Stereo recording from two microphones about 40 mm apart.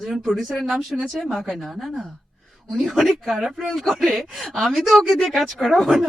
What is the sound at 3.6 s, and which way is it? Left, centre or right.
A man's voice, centre.